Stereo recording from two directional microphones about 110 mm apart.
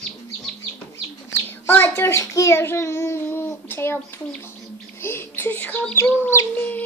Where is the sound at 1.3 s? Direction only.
20° left (ahead or behind).